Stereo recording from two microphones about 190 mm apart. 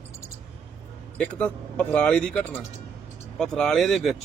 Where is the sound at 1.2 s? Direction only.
5° left (ahead or behind).